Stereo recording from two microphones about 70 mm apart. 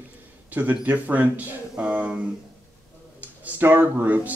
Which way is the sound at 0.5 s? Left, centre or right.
Right.